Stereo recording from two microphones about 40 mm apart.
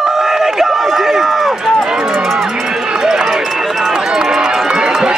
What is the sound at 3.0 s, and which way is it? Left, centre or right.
Run, centre.